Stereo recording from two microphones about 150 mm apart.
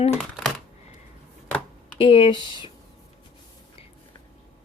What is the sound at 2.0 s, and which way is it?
Speech, 35° left (ahead or behind).